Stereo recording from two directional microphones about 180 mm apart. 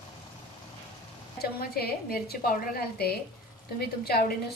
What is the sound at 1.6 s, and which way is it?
A woman's voice, 55° left (ahead or behind).